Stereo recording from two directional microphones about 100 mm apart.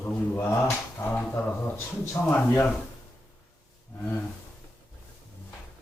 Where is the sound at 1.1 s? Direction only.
15° left (ahead or behind).